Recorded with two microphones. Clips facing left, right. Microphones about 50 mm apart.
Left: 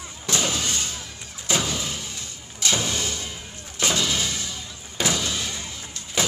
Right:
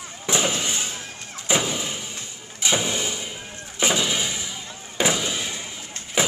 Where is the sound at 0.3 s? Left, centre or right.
Centre.